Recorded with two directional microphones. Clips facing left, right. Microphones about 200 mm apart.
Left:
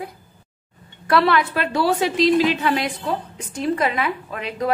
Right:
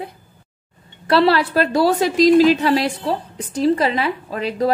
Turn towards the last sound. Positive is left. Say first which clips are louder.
# right 5 dB
turn(degrees=-35)  # may be behind; listen again after turning